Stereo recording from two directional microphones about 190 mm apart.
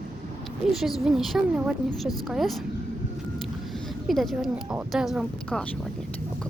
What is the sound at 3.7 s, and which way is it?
A woman's voice, centre (ahead or behind).